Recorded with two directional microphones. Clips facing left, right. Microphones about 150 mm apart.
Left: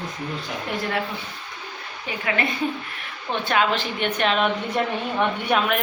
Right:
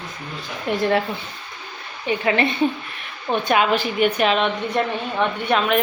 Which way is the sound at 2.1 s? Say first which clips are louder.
Right 9 dB; 25° right (ahead or behind).